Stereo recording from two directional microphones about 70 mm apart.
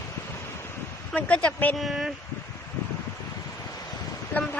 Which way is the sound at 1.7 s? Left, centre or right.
Centre.